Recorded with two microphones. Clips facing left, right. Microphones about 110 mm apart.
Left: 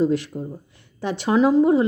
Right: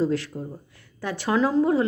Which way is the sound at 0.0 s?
15° left (ahead or behind).